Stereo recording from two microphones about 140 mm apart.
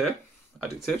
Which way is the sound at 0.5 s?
Centre (ahead or behind).